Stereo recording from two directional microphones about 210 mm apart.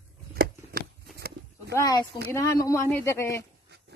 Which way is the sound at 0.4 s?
45° right (ahead or behind).